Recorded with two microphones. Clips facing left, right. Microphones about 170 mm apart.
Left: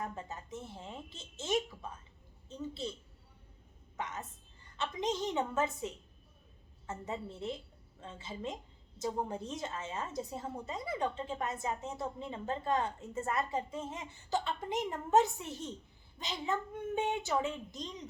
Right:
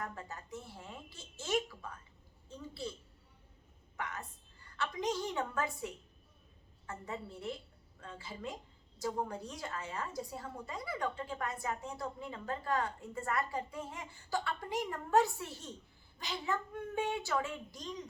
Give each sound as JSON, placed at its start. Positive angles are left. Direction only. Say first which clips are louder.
{"t": 0.0, "sound": "a woman's voice", "louder": "left 2 dB", "side_deg": 20}
{"t": 3.9, "sound": "a woman's voice", "louder": "left 2 dB", "side_deg": 20}